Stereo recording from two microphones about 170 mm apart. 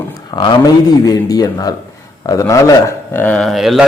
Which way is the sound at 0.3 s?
30° left (ahead or behind).